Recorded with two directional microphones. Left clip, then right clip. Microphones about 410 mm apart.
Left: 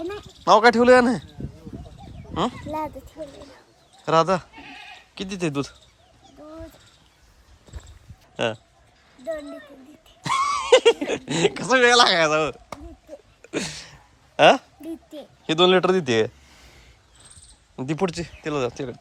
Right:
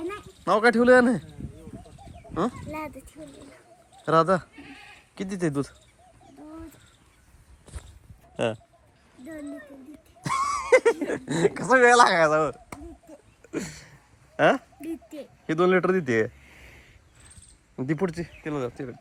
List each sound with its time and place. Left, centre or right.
0.4 s a man's voice: centre
4.0 s a man's voice: centre
8.4 s a man's voice: centre
10.2 s speech: centre
13.5 s a sound: centre
14.3 s speech: centre
17.7 s speech: centre